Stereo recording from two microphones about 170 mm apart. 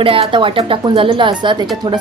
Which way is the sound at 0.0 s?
30° right (ahead or behind).